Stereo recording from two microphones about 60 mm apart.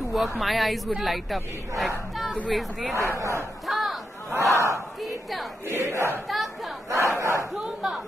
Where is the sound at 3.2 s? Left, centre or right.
Right.